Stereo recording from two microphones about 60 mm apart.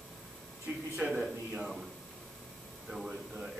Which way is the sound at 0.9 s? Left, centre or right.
Centre.